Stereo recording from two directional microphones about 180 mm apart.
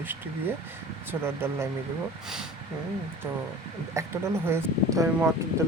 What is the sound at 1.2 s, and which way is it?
Speech, 15° right (ahead or behind).